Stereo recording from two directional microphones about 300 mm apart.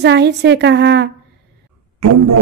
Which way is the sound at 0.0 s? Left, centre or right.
Right.